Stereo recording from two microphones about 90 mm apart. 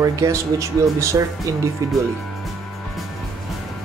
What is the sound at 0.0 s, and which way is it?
Speech, 35° right (ahead or behind).